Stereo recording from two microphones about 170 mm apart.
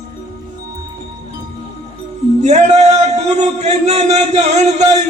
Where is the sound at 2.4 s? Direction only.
45° right (ahead or behind).